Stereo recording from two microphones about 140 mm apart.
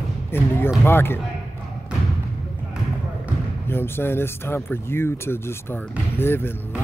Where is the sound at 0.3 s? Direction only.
15° left (ahead or behind).